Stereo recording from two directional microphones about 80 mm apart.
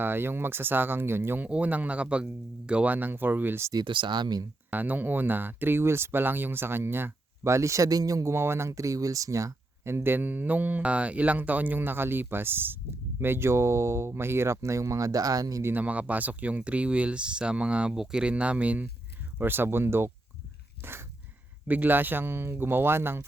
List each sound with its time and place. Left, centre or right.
0.0 s speech: right
1.5 s speech: centre
3.8 s speech: right
4.7 s speech: right
15.6 s speech: right